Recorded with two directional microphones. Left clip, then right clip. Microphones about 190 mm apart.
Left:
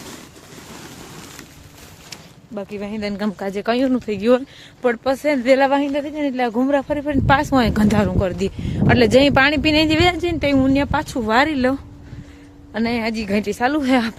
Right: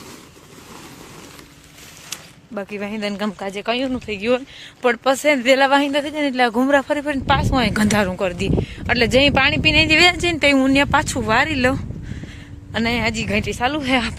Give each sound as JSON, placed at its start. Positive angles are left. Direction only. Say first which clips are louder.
{"t": 2.6, "sound": "speech", "louder": "right 1 dB", "side_deg": -10}
{"t": 3.3, "sound": "speech", "louder": "left 2 dB", "side_deg": 25}
{"t": 4.8, "sound": "speech", "louder": "right 2 dB", "side_deg": 5}
{"t": 7.3, "sound": "speech", "louder": "left 3 dB", "side_deg": 35}
{"t": 7.8, "sound": "speech", "louder": "even", "side_deg": 5}
{"t": 10.0, "sound": "a woman's voice", "louder": "right 3 dB", "side_deg": 5}
{"t": 13.4, "sound": "speech", "louder": "left 2 dB", "side_deg": 25}